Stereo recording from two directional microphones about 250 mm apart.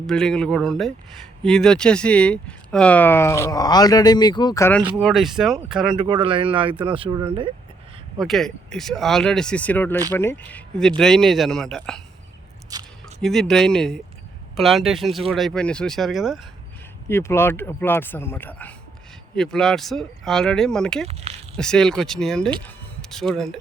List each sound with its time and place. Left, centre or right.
0.1 s speech: centre
4.9 s speech: centre
6.0 s speech: centre
8.2 s speech: centre
12.7 s squish: centre
13.2 s speech: centre
17.1 s speech: centre
21.1 s speech: right
21.5 s speech: centre